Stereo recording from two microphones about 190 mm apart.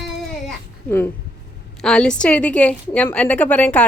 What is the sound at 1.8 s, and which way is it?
A woman's voice, 5° left (ahead or behind).